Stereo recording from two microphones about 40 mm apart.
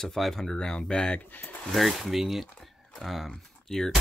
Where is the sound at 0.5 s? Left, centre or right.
Centre.